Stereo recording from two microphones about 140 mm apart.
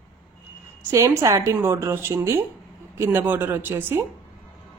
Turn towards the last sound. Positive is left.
turn(degrees=-15)  # may be behind; listen again after turning